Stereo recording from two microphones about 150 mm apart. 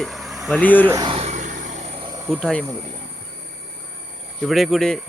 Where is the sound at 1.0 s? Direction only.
40° right (ahead or behind).